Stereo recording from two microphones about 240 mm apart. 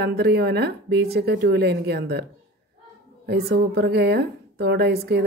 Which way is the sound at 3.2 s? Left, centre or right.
Right.